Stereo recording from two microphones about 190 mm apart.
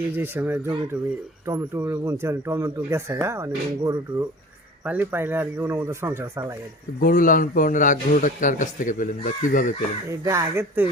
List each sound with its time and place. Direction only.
0.1 s speech: 10° right (ahead or behind)
7.0 s a man's voice: 45° left (ahead or behind)
10.1 s speech: 15° right (ahead or behind)